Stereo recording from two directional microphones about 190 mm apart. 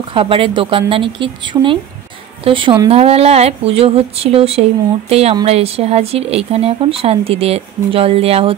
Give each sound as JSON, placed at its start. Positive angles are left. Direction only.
{"t": 0.1, "sound": "speech", "side_deg": -30}